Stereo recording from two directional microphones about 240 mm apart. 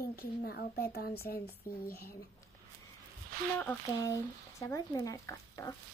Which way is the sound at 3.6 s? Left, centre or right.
Centre.